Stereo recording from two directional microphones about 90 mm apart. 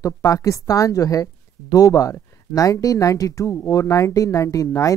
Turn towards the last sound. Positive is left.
turn(degrees=40)  # may be behind; listen again after turning